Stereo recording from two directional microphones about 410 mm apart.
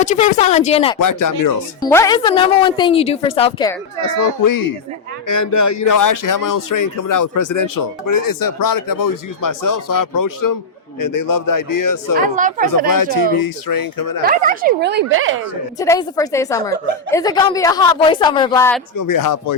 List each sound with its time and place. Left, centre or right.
0.0 s a woman's voice: centre
0.9 s speech: left
1.8 s a woman's voice: centre
4.0 s speech: left
12.4 s speech: centre
13.4 s speech: left
14.3 s speech: right
15.8 s a woman's voice: centre
18.9 s speech: left